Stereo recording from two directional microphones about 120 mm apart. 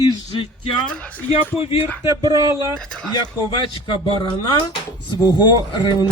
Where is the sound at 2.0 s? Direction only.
25° right (ahead or behind).